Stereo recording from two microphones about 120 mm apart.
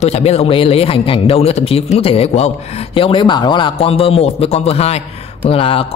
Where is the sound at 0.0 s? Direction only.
60° left (ahead or behind).